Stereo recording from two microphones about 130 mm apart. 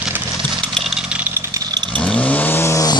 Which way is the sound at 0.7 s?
Centre (ahead or behind).